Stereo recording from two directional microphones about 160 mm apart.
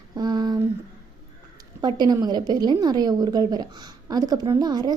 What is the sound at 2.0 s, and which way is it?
A woman's voice, 25° right (ahead or behind).